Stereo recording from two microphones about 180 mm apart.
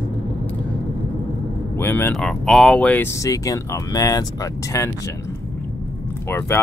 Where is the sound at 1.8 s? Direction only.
10° left (ahead or behind).